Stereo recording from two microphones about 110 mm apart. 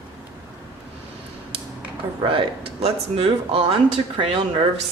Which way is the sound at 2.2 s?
50° right (ahead or behind).